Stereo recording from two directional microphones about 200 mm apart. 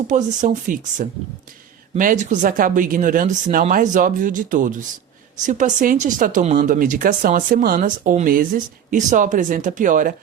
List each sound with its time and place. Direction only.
0.1 s speech: 40° right (ahead or behind)